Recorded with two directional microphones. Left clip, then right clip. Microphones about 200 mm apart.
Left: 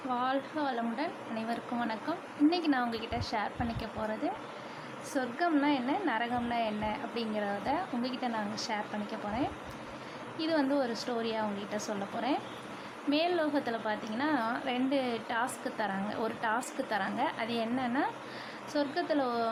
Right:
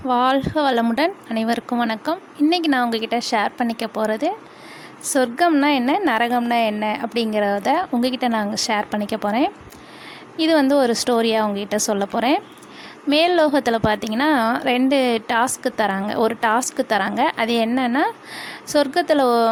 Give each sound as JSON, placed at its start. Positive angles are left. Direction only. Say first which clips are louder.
{"t": 0.1, "sound": "a woman's voice", "louder": "right 15 dB", "side_deg": -50}